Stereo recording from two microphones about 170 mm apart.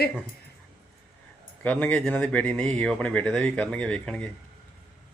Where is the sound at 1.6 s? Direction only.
10° left (ahead or behind).